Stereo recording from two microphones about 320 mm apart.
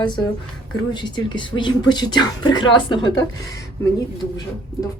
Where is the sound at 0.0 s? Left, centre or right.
Centre.